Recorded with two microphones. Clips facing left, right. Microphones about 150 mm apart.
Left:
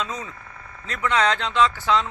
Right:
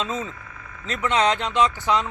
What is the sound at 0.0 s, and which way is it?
Speech, 25° right (ahead or behind).